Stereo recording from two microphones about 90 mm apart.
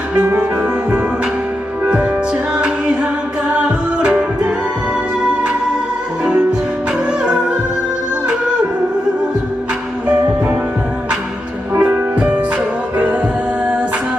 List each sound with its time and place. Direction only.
0.9 s music: 15° right (ahead or behind)
2.6 s a capella: 10° right (ahead or behind)
4.0 s music: 10° right (ahead or behind)
7.2 s music: 5° right (ahead or behind)
11.8 s music: 20° right (ahead or behind)